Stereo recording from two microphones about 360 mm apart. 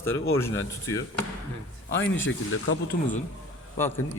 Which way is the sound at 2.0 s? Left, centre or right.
Left.